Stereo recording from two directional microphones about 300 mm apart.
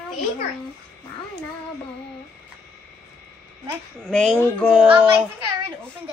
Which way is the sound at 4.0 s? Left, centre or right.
Centre.